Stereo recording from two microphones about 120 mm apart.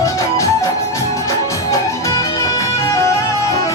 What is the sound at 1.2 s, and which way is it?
Music, 25° left (ahead or behind).